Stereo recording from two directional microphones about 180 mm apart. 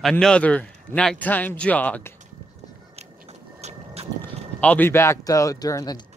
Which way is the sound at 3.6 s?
35° right (ahead or behind).